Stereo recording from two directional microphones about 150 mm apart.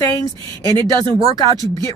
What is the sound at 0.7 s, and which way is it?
Speech, 30° right (ahead or behind).